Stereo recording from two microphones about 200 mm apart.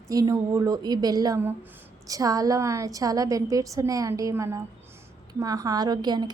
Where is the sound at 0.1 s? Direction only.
15° right (ahead or behind).